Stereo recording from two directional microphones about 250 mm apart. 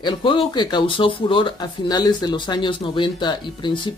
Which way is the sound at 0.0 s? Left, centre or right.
Centre.